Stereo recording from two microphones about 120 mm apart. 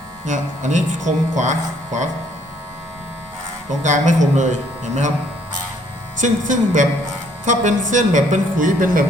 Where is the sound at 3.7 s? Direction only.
90° right.